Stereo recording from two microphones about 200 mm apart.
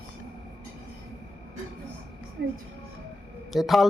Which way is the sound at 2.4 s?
55° right (ahead or behind).